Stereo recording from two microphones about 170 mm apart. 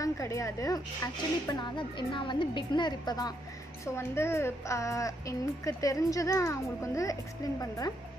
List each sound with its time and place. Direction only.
0.0 s a woman's voice: 20° left (ahead or behind)